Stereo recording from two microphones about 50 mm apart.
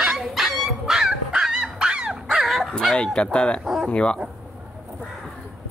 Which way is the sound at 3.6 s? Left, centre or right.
Centre.